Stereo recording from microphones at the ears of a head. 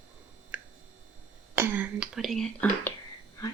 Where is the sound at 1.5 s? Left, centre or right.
Right.